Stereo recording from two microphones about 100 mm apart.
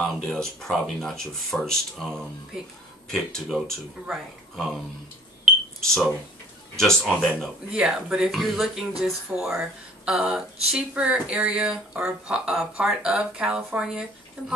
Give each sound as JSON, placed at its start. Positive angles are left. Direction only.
{"t": 0.0, "sound": "speech", "side_deg": 5}
{"t": 5.4, "sound": "smoke detector", "side_deg": -5}
{"t": 6.8, "sound": "speech", "side_deg": 5}
{"t": 7.7, "sound": "speech", "side_deg": -5}